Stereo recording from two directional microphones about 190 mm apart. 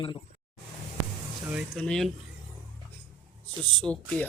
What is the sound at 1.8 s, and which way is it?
Speech, 5° left (ahead or behind).